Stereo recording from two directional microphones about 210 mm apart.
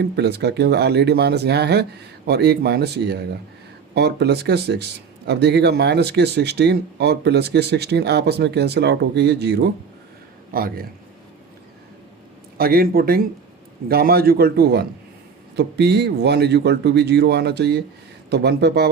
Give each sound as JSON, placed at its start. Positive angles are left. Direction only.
{"t": 0.0, "sound": "speech", "side_deg": -50}
{"t": 12.5, "sound": "speech", "side_deg": -45}